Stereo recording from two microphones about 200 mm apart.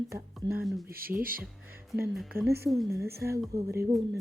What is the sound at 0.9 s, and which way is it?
Speech, 45° right (ahead or behind).